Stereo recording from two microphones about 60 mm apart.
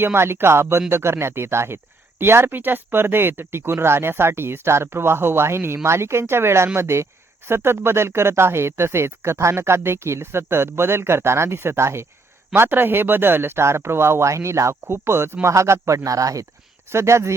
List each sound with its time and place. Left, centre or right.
0.0 s speech: right
12.5 s speech: right
15.5 s speech: right
16.9 s speech: right